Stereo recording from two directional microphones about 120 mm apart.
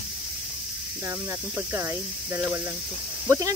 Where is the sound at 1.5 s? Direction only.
20° right (ahead or behind).